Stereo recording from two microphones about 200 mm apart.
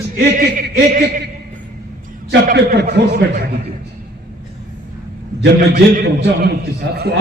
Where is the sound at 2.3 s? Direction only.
55° right (ahead or behind).